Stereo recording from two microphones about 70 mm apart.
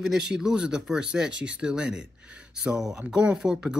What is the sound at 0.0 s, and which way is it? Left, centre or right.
Speech, centre.